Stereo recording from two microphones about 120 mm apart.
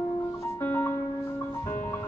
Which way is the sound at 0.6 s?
15° left (ahead or behind).